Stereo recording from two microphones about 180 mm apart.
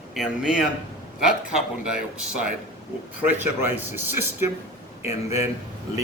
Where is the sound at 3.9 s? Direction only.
15° right (ahead or behind).